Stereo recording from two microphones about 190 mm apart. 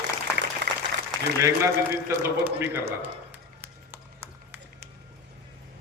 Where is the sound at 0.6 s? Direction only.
65° right (ahead or behind).